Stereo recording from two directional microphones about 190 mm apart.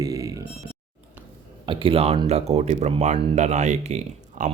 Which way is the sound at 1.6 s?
25° right (ahead or behind).